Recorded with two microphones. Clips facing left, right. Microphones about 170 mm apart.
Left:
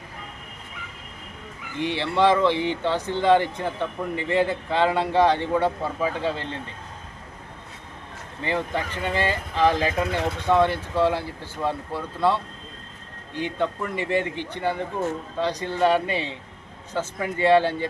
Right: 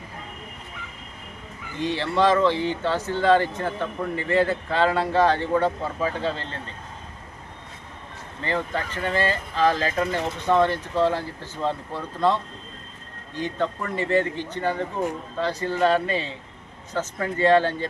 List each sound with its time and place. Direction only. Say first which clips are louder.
1.8 s speech: even; 15° left (ahead or behind)
8.4 s speech: left 1 dB; 15° left (ahead or behind)